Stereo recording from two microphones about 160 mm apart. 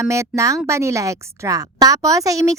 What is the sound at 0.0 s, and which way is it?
A woman's voice, 20° right (ahead or behind).